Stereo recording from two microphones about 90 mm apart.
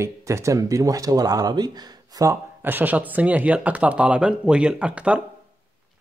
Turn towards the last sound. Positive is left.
turn(degrees=-15)  # may be behind; listen again after turning